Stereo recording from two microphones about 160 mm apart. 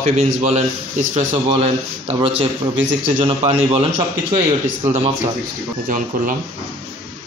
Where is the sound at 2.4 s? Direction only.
50° right (ahead or behind).